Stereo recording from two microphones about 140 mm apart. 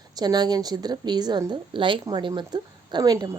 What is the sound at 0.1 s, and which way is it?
A woman's voice, 30° right (ahead or behind).